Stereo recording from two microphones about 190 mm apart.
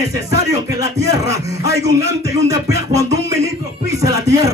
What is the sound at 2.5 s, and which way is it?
Music, 15° right (ahead or behind).